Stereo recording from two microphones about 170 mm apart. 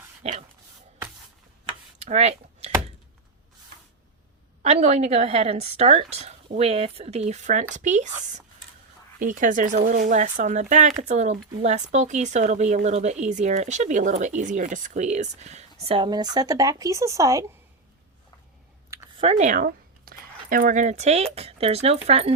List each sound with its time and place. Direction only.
0.2 s dog: 40° right (ahead or behind)
2.0 s typing: 40° right (ahead or behind)
4.6 s a woman's voice: 40° right (ahead or behind)
9.1 s speech: 50° right (ahead or behind); by 17.4 s 20° right (ahead or behind)
19.1 s a woman's voice: 35° right (ahead or behind)